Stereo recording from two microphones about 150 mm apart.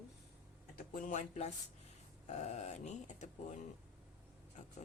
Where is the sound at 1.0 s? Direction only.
60° left (ahead or behind).